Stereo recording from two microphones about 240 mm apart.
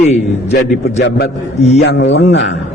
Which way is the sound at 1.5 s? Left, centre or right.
Left.